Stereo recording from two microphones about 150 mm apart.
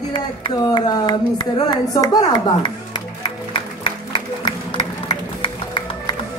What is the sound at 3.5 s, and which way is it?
Music, 35° left (ahead or behind).